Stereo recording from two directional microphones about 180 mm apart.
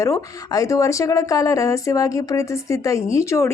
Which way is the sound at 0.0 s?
20° left (ahead or behind).